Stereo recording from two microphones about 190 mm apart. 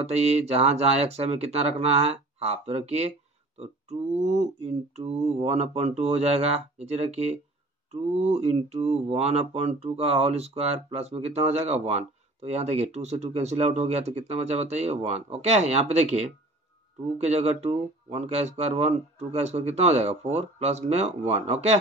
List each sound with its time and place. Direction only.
0.0 s speech: 35° right (ahead or behind)
4.2 s speech: 35° right (ahead or behind)